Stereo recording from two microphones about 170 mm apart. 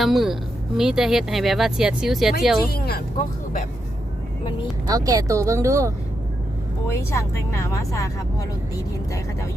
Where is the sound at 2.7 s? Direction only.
65° left (ahead or behind).